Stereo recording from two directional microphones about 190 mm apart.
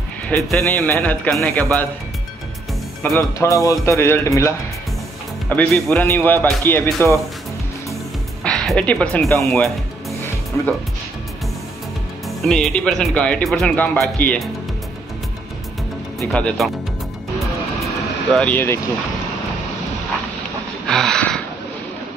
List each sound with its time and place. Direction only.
0.3 s a man's voice: 5° left (ahead or behind)
3.0 s a man's voice: 15° left (ahead or behind)
8.5 s speech: 5° left (ahead or behind)
12.4 s speech: centre (ahead or behind)
16.3 s speech: 5° left (ahead or behind)
18.3 s a man's voice: 10° left (ahead or behind)
20.9 s a sound: 5° left (ahead or behind)